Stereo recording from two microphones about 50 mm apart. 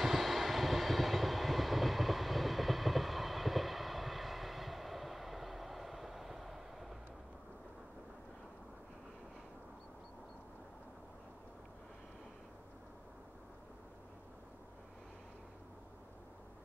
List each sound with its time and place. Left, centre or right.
0.0 s vehicle: centre